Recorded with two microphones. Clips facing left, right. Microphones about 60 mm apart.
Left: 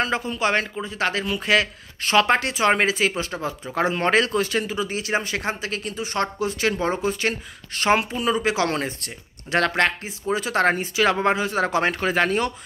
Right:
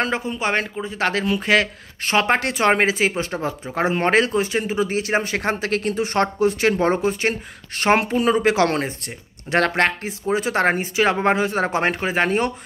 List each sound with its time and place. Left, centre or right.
0.2 s speech: right
0.8 s speech: right
2.4 s speech: right
2.7 s speech: right
4.4 s speech: centre
4.6 s speech: right